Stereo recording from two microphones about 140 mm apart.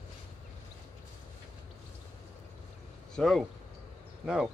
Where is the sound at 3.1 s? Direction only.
Centre (ahead or behind).